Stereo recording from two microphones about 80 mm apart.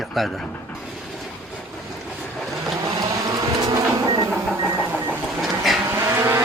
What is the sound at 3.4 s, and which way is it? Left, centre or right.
Printer, right.